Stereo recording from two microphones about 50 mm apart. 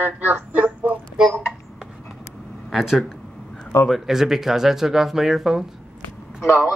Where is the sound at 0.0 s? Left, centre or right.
Right.